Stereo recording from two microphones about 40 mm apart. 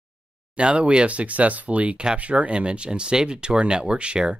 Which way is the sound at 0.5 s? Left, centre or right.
Right.